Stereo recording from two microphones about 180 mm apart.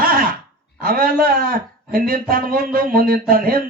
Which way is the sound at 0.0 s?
55° right (ahead or behind).